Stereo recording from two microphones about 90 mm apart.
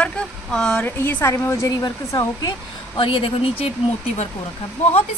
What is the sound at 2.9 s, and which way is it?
Speech, 85° left.